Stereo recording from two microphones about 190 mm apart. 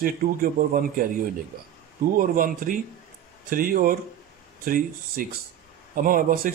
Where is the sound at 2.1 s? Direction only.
45° right (ahead or behind).